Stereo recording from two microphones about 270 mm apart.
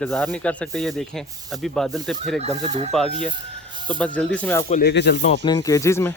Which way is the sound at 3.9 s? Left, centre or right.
Centre.